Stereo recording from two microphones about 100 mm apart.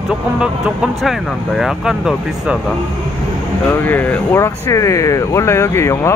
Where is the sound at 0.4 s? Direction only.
5° right (ahead or behind).